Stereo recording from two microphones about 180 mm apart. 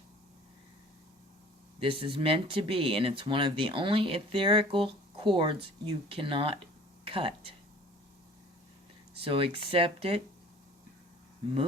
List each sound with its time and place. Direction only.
1.8 s speech: 30° right (ahead or behind)
9.2 s speech: 30° right (ahead or behind)